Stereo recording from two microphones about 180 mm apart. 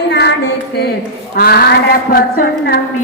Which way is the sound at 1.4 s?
55° left (ahead or behind).